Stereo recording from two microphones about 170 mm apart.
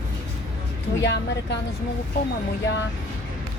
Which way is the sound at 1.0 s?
90° left.